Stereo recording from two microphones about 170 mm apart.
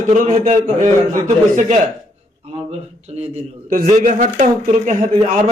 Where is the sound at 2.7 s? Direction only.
40° right (ahead or behind).